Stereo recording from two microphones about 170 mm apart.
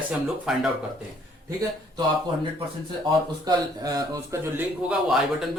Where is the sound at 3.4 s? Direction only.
20° right (ahead or behind).